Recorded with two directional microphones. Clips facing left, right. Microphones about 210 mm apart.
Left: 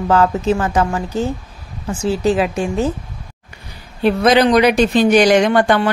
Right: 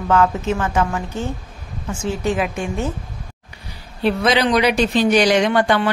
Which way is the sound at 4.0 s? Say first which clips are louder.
Left 5 dB; 45° left (ahead or behind).